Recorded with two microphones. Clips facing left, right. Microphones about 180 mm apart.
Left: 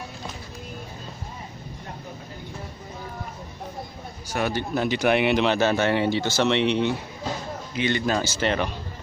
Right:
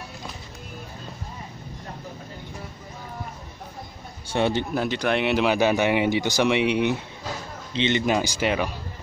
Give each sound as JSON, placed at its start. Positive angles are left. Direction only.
{"t": 4.3, "sound": "a man's voice", "side_deg": -25}
{"t": 4.7, "sound": "speech", "side_deg": 5}
{"t": 5.3, "sound": "speech", "side_deg": -10}